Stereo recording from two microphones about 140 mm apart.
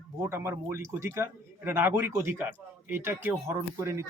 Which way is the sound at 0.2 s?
15° right (ahead or behind).